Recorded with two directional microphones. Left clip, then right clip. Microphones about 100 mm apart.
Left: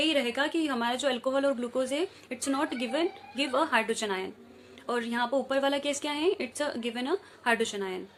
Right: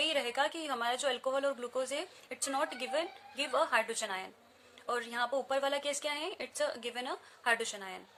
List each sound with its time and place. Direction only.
0.0 s speech: 20° right (ahead or behind)